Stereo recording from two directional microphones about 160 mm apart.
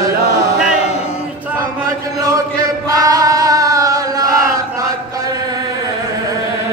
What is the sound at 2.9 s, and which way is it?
Chant, 20° right (ahead or behind).